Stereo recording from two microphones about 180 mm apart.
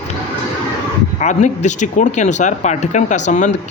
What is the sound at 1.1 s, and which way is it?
Speech, 40° left (ahead or behind).